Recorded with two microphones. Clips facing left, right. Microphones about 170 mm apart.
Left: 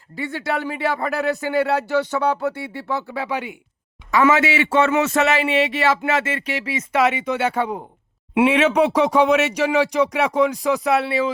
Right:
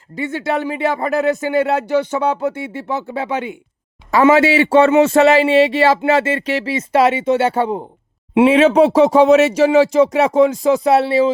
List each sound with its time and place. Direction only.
0.2 s a man's voice: 20° right (ahead or behind)